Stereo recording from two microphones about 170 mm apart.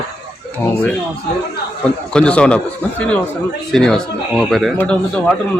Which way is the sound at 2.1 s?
5° left (ahead or behind).